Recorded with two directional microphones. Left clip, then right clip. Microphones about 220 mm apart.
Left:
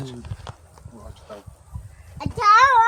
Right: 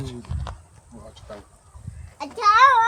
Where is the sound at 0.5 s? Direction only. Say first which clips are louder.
Right 2 dB; 5° left (ahead or behind).